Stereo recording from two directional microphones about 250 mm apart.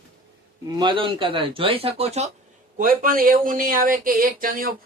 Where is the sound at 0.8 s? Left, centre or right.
Centre.